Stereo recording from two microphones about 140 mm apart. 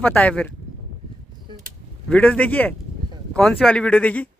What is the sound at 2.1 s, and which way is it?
Speech, 10° left (ahead or behind).